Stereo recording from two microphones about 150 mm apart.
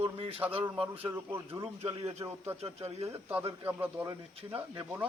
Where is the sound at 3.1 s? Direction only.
10° right (ahead or behind).